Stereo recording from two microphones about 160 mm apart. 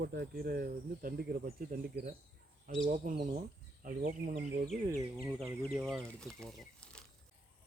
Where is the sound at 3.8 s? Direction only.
60° right (ahead or behind).